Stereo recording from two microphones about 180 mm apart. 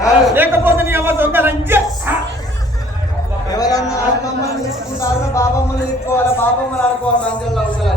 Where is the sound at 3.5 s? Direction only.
20° left (ahead or behind).